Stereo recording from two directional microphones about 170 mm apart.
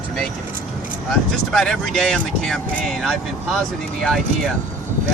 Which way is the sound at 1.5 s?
5° left (ahead or behind).